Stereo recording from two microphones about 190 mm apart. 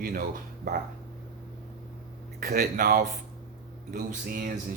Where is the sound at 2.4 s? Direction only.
55° right (ahead or behind).